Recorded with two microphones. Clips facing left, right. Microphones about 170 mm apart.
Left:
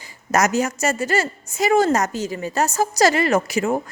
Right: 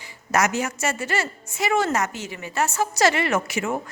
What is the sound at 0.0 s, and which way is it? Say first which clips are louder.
A woman's voice: left 3 dB; 40° left (ahead or behind).